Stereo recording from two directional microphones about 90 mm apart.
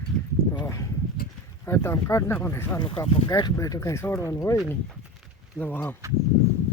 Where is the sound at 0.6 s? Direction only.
35° left (ahead or behind).